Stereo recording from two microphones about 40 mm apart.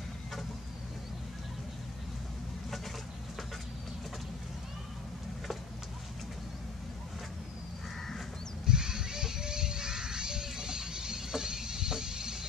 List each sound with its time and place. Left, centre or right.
8.6 s children playing: centre